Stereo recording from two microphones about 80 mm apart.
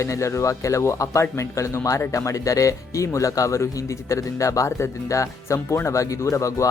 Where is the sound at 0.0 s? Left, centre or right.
Left.